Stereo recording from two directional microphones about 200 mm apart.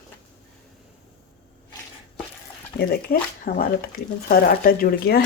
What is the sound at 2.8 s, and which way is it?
Speech, 50° left (ahead or behind).